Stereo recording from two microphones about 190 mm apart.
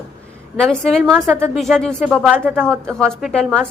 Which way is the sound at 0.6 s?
5° left (ahead or behind).